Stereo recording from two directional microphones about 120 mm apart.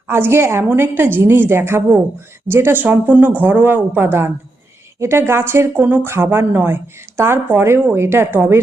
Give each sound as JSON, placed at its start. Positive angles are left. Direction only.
{"t": 0.1, "sound": "a woman's voice", "side_deg": -20}